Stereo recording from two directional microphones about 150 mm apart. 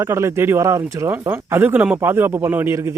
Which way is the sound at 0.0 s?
20° right (ahead or behind).